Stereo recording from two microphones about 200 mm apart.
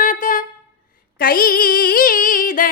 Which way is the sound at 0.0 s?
40° left (ahead or behind).